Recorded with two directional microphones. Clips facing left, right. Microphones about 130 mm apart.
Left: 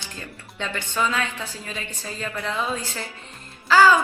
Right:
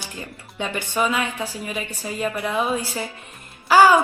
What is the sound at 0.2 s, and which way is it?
A woman's voice, 15° right (ahead or behind).